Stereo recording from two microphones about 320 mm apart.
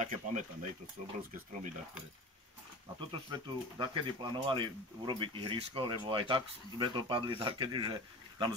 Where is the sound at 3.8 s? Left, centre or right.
Centre.